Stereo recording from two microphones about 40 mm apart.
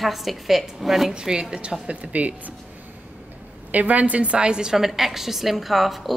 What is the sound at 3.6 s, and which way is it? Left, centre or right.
Speech, right.